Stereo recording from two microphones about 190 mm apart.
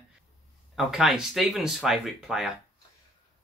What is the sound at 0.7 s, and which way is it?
Speech, centre (ahead or behind).